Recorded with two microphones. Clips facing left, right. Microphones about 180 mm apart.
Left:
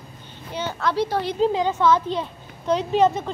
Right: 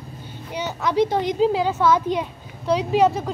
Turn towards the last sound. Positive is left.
turn(degrees=-5)  # may be behind; listen again after turning